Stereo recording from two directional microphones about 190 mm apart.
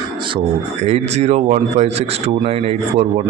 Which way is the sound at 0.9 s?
35° right (ahead or behind).